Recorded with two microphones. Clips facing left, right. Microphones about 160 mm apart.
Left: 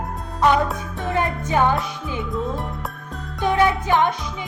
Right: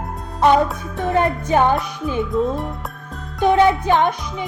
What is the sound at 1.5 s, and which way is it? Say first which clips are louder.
Music: right 3 dB; 15° right (ahead or behind).